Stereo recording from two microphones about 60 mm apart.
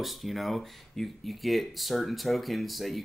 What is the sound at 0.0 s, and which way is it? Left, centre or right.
Speech, centre.